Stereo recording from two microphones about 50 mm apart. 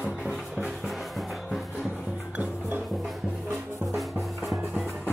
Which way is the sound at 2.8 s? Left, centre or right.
Centre.